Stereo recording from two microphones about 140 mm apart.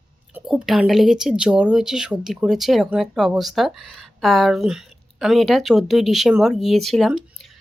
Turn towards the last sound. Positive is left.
turn(degrees=0)  # may be behind; listen again after turning